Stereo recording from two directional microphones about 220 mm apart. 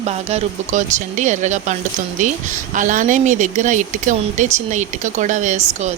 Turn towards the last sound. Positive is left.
turn(degrees=-30)  # may be behind; listen again after turning